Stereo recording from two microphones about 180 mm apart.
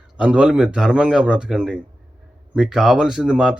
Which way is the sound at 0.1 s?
5° right (ahead or behind).